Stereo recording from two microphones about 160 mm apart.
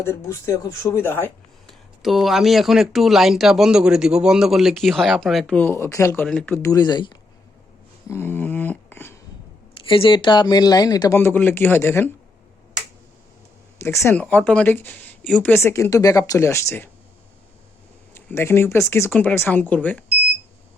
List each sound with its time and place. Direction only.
0.0 s speech: 15° left (ahead or behind)
1.6 s speech: centre (ahead or behind)
5.5 s speech: 15° left (ahead or behind)
8.0 s a sound: 15° left (ahead or behind)
9.8 s speech: 35° left (ahead or behind); by 12.0 s 15° left (ahead or behind)
13.7 s speech: 15° left (ahead or behind)
18.1 s speech: 15° left (ahead or behind)